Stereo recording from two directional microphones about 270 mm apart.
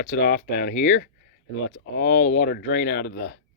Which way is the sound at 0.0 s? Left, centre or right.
Left.